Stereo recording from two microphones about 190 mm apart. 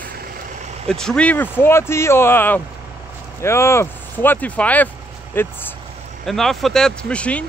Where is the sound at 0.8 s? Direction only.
5° left (ahead or behind).